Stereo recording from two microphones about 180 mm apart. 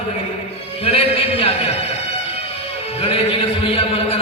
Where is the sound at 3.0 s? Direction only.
35° left (ahead or behind).